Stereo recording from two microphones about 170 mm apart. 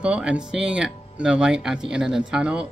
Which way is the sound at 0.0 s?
5° right (ahead or behind).